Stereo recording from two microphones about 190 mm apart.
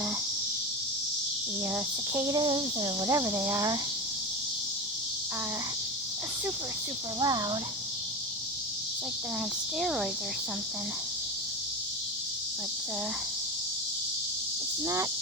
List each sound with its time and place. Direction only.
1.7 s speech: 15° right (ahead or behind)
7.2 s speech: 20° right (ahead or behind)
9.8 s speech: centre (ahead or behind)